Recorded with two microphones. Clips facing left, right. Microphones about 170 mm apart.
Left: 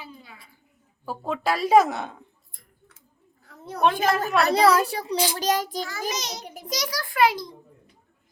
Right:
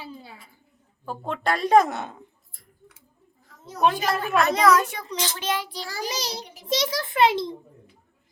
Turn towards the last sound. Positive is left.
turn(degrees=-25)  # may be behind; listen again after turning